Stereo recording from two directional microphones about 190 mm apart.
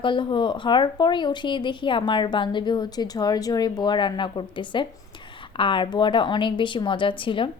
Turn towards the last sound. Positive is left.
turn(degrees=25)  # may be behind; listen again after turning